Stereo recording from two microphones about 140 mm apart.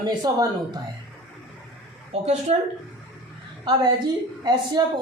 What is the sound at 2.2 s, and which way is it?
Speech, 55° right (ahead or behind).